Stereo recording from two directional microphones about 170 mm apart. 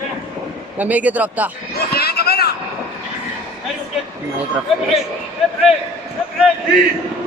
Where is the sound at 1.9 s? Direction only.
65° left (ahead or behind).